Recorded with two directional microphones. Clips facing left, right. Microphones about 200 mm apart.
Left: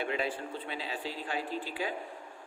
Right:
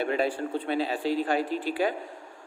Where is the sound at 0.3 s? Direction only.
70° right (ahead or behind).